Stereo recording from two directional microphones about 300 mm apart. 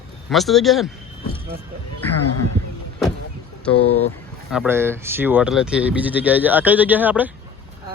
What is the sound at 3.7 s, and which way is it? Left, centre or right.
Speech, left.